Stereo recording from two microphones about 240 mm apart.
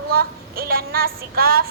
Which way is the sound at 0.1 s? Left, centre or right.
Right.